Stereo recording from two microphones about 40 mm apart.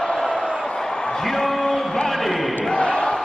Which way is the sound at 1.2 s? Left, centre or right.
Centre.